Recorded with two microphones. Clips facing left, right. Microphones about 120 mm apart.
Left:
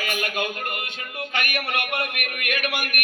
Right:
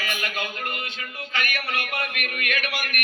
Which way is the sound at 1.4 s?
60° left (ahead or behind).